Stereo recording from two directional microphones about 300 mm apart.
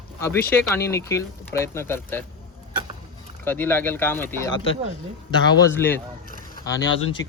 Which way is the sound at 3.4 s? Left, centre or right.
Centre.